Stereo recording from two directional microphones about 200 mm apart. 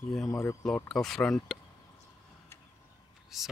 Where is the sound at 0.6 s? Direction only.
Centre (ahead or behind).